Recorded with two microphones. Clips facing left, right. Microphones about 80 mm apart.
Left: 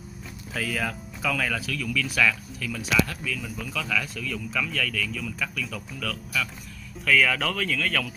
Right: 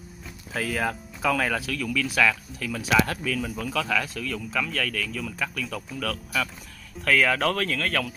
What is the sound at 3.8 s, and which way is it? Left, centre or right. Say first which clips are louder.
Speech: right 2 dB; right.